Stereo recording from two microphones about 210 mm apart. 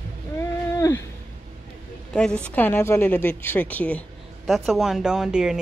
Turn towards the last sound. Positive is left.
turn(degrees=-5)  # may be behind; listen again after turning